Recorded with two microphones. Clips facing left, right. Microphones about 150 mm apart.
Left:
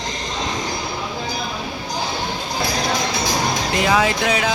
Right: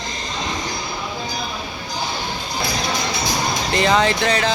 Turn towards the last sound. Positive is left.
turn(degrees=5)  # may be behind; listen again after turning